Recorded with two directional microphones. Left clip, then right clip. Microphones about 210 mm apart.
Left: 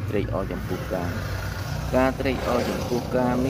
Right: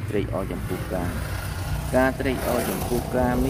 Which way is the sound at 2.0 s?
5° right (ahead or behind).